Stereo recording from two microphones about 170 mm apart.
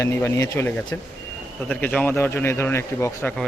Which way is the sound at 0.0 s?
15° left (ahead or behind).